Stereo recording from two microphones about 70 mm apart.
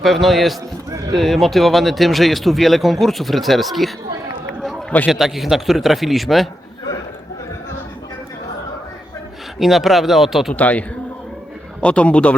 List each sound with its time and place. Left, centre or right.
0.0 s speech: centre
5.0 s speech: centre
9.6 s speech: centre
10.5 s a man's voice: left